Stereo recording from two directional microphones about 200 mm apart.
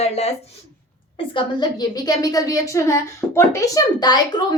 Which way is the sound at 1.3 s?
25° left (ahead or behind).